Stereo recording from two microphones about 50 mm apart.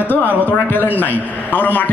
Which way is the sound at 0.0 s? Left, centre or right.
Left.